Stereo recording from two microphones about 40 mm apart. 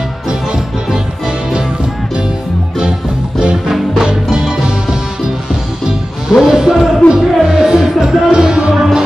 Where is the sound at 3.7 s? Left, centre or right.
Centre.